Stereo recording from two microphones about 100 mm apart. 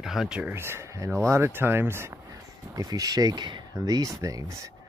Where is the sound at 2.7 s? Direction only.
40° right (ahead or behind).